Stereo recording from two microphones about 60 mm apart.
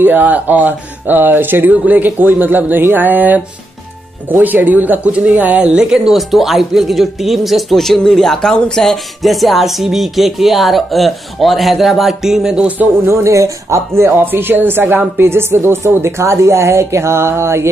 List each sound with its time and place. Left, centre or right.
0.0 s speech: right; by 12.6 s centre
13.1 s speech: right
14.2 s speech: right